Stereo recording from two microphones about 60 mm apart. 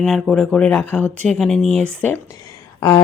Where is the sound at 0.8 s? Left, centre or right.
Left.